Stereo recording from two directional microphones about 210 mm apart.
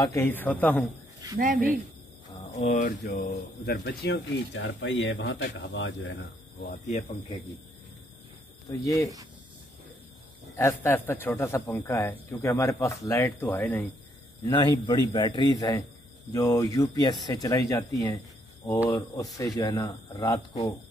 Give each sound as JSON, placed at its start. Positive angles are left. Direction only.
{"t": 0.0, "sound": "speech", "side_deg": 10}
{"t": 1.4, "sound": "speech", "side_deg": -40}
{"t": 2.5, "sound": "speech", "side_deg": 35}
{"t": 3.0, "sound": "speech", "side_deg": 50}
{"t": 6.6, "sound": "speech", "side_deg": 40}
{"t": 8.6, "sound": "speech", "side_deg": 20}
{"t": 10.5, "sound": "speech", "side_deg": 10}
{"t": 14.4, "sound": "a man's voice", "side_deg": 20}